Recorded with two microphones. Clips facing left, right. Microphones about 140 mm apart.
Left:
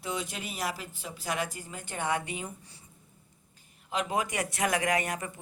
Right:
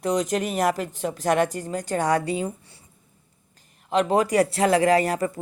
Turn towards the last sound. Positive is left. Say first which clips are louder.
# right 10 dB
turn(degrees=-35)  # may be behind; listen again after turning